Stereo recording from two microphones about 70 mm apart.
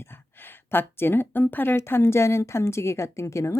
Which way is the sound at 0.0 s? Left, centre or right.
Left.